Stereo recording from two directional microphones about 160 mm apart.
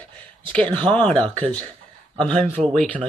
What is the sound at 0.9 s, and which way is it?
Speech, 10° left (ahead or behind).